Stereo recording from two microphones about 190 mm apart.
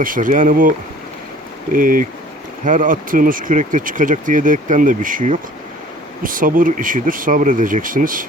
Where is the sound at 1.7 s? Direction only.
45° right (ahead or behind).